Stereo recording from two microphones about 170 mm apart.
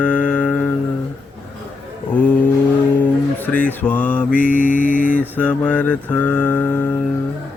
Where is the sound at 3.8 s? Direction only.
10° left (ahead or behind).